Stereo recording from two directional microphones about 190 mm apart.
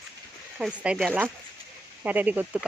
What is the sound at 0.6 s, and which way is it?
Speech, 5° right (ahead or behind).